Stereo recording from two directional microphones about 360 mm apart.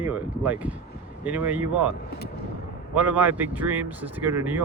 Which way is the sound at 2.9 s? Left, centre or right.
Centre.